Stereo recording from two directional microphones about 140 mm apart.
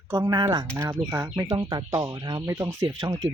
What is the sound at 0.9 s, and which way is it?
Speech, 15° right (ahead or behind).